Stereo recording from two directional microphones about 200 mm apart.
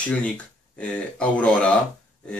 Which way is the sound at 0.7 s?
5° left (ahead or behind).